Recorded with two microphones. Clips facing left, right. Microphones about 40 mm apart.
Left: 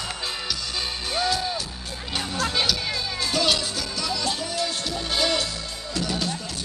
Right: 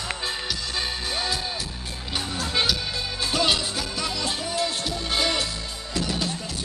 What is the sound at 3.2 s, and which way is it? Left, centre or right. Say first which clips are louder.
Music: even; centre.